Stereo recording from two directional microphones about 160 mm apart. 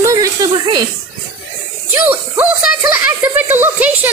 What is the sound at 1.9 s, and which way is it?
Speech, 10° right (ahead or behind).